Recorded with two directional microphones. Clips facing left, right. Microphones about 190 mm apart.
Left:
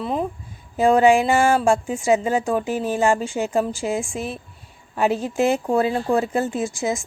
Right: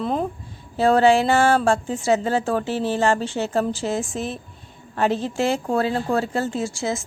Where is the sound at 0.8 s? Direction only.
15° left (ahead or behind).